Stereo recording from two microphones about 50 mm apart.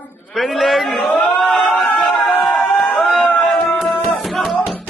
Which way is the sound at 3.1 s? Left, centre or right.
Left.